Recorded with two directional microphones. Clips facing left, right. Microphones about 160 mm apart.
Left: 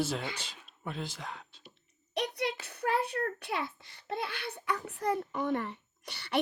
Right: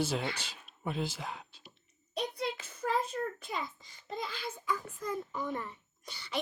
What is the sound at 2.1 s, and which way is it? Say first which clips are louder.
A child's voice: left 2 dB; 70° left (ahead or behind).